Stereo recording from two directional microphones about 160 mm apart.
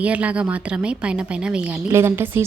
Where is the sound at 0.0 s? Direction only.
10° right (ahead or behind).